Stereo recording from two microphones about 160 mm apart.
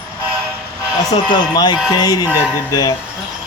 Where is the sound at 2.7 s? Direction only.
20° left (ahead or behind).